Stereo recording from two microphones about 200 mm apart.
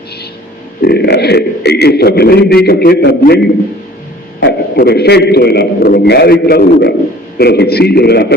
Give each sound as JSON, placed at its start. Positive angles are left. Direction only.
{"t": 0.8, "sound": "a man's voice", "side_deg": 50}
{"t": 4.4, "sound": "a man's voice", "side_deg": 55}